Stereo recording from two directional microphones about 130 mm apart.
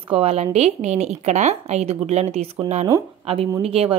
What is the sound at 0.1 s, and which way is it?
Speech, 50° right (ahead or behind).